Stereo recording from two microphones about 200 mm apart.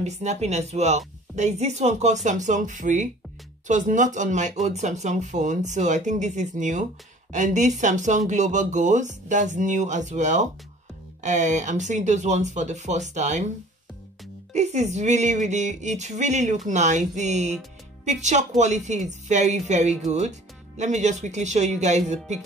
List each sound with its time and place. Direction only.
0.0 s speech: 35° right (ahead or behind)
14.5 s speech: 35° right (ahead or behind)